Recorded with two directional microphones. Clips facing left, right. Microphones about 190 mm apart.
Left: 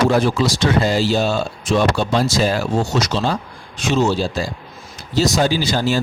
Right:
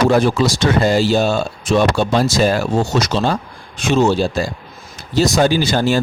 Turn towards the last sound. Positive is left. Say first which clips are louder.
# right 3 dB
turn(degrees=-55)  # may be behind; listen again after turning